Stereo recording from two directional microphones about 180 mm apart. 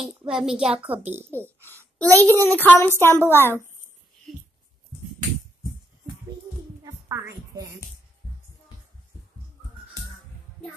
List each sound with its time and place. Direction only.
0.4 s a woman's voice: 5° right (ahead or behind)
2.0 s a child's voice: 10° left (ahead or behind)
4.3 s a sound: centre (ahead or behind)
6.8 s heart sounds: 15° right (ahead or behind)